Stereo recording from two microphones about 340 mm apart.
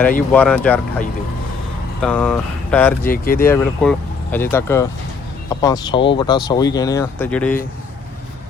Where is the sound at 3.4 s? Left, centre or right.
Centre.